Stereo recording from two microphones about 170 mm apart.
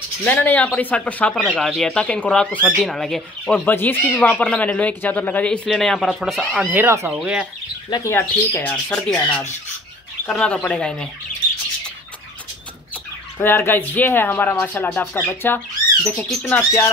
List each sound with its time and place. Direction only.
0.2 s speech: 10° left (ahead or behind)
7.9 s speech: 15° left (ahead or behind)
10.2 s speech: 5° left (ahead or behind)
12.9 s speech: 10° left (ahead or behind)